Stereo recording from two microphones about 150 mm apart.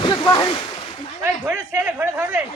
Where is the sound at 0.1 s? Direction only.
30° left (ahead or behind).